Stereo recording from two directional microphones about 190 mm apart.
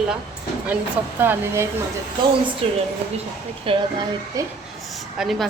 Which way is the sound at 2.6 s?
30° right (ahead or behind).